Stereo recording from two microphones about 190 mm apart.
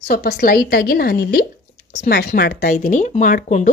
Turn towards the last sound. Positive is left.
turn(degrees=40)  # may be behind; listen again after turning